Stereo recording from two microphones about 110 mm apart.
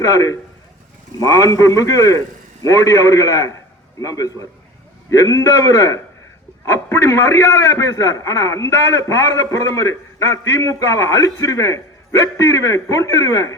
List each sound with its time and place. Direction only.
0.0 s a man's voice: 30° left (ahead or behind)